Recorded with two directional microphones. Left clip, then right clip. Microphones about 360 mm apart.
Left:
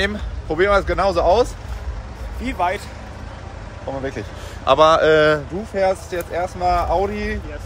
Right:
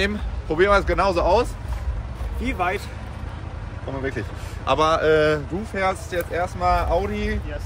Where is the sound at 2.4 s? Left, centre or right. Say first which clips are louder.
Left 3 dB; centre.